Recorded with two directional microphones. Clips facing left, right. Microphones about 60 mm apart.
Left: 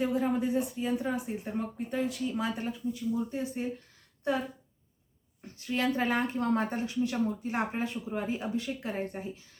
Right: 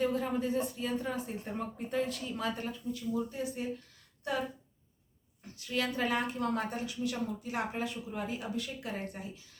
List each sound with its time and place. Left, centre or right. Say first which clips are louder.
0.0 s speech: left 3 dB; centre; by 4.4 s left
5.5 s a woman's voice: left 4 dB; left